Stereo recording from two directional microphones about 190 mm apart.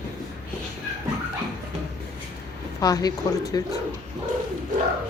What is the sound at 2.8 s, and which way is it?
Speech, 20° left (ahead or behind).